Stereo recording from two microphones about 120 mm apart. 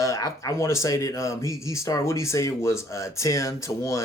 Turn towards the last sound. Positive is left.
turn(degrees=25)  # may be behind; listen again after turning